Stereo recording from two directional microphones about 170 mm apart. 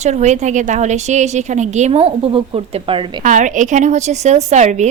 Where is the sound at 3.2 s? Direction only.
50° right (ahead or behind).